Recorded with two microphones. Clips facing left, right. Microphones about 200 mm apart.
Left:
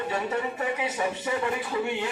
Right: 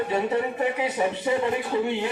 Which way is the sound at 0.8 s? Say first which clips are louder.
Right 4 dB; 25° right (ahead or behind).